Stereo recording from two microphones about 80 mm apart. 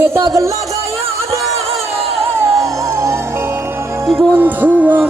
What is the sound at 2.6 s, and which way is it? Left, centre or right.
Music, right.